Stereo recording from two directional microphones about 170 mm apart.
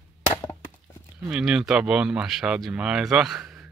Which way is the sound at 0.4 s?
15° left (ahead or behind).